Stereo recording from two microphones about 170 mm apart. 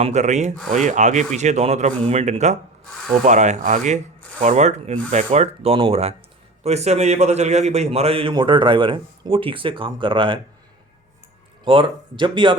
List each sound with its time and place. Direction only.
0.0 s a man's voice: 45° right (ahead or behind)
11.6 s speech: 30° right (ahead or behind)